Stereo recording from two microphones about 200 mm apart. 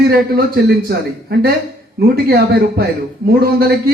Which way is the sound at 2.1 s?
50° right (ahead or behind).